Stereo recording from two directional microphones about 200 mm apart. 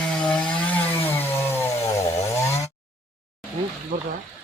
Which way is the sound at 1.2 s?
10° left (ahead or behind).